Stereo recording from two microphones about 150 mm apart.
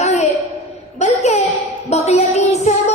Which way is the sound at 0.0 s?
45° left (ahead or behind).